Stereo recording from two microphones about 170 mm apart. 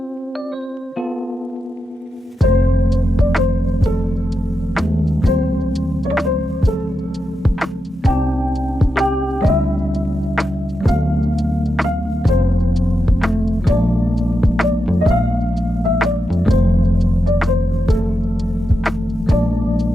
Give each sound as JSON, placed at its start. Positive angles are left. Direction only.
{"t": 2.4, "sound": "music", "side_deg": 0}
{"t": 10.8, "sound": "music", "side_deg": 0}